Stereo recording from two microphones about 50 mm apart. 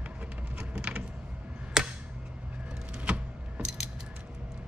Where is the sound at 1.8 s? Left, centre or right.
Centre.